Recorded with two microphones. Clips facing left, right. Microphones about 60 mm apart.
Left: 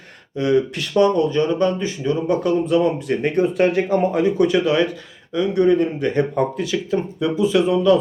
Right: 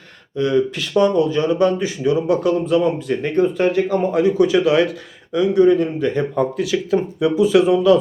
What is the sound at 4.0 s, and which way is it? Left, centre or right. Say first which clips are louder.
A man's voice: right 3 dB; centre.